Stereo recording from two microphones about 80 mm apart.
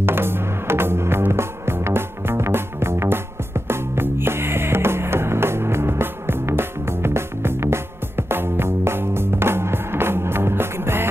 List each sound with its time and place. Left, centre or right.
0.0 s music: right